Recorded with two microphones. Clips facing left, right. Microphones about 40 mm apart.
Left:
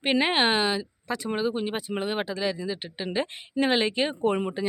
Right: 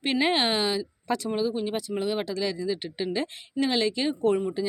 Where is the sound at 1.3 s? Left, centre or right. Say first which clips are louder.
Left 2 dB; left; by 3.1 s centre.